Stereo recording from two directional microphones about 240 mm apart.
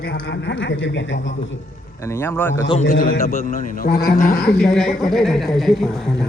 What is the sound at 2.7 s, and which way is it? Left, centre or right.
A man's voice, left.